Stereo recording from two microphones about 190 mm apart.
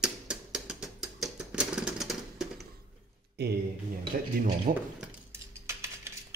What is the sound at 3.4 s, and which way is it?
Speech, 60° right (ahead or behind).